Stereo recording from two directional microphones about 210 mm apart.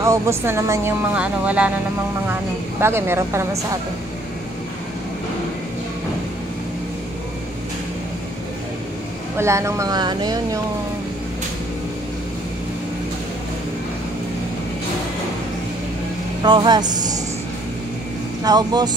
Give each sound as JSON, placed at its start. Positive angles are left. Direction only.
{"t": 0.0, "sound": "speech", "side_deg": -15}
{"t": 2.8, "sound": "speech", "side_deg": -10}
{"t": 9.4, "sound": "speech", "side_deg": -15}
{"t": 16.4, "sound": "speech", "side_deg": -20}
{"t": 18.4, "sound": "speech", "side_deg": -20}